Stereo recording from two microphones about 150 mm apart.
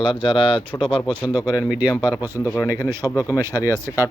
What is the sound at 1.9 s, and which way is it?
Speech, 30° left (ahead or behind).